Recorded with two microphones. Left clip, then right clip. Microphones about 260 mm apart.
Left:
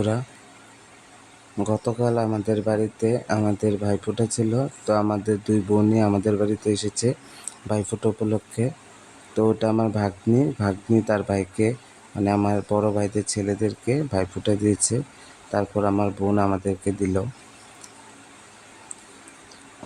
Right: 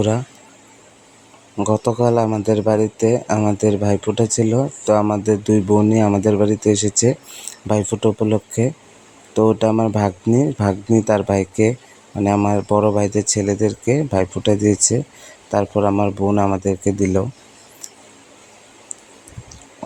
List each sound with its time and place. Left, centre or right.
1.5 s speech: centre